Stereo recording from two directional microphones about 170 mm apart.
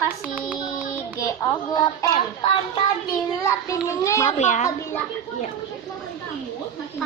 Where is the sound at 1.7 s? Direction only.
25° left (ahead or behind).